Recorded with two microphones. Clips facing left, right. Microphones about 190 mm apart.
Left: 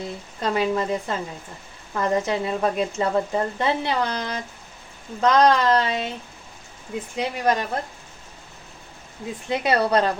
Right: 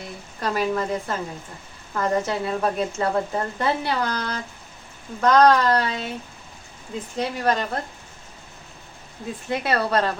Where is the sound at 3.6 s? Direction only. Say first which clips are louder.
Right 2 dB; 20° left (ahead or behind).